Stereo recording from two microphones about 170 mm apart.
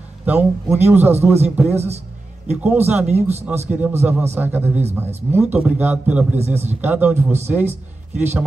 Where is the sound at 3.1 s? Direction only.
40° right (ahead or behind).